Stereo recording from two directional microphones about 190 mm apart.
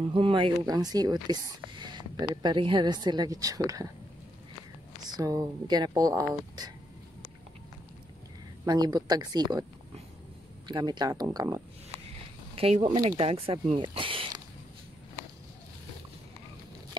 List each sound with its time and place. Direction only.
0.1 s speech: 25° right (ahead or behind)
5.0 s speech: 20° right (ahead or behind)
8.6 s speech: 20° right (ahead or behind)
10.7 s speech: 20° right (ahead or behind)
12.5 s speech: 35° right (ahead or behind)
12.9 s speech: 20° right (ahead or behind)
13.2 s speech: 30° right (ahead or behind)